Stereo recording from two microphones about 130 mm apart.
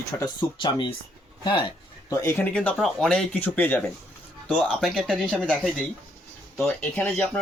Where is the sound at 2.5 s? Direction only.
5° left (ahead or behind).